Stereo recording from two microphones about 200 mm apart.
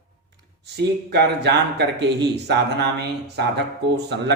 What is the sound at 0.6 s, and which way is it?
Speech, 55° right (ahead or behind).